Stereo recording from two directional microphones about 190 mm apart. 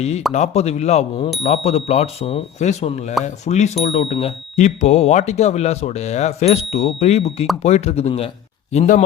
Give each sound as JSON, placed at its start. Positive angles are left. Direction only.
{"t": 0.3, "sound": "speech", "side_deg": 35}